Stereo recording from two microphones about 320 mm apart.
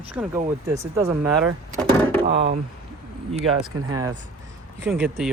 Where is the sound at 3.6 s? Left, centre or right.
Centre.